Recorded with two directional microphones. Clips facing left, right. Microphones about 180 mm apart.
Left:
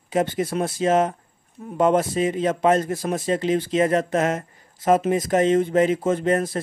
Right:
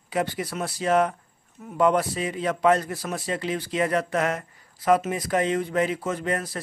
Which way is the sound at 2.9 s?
45° left (ahead or behind).